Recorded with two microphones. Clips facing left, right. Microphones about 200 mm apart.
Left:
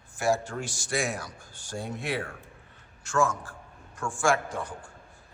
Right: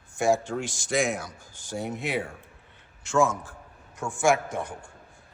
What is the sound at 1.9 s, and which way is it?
Speech, 20° right (ahead or behind).